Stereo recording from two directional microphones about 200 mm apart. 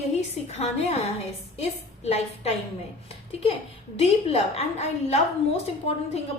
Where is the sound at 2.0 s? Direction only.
30° left (ahead or behind).